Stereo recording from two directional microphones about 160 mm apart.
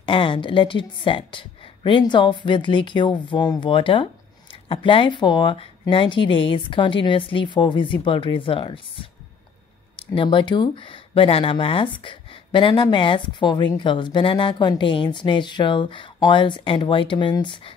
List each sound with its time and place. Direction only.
0.0 s a woman's voice: 30° left (ahead or behind)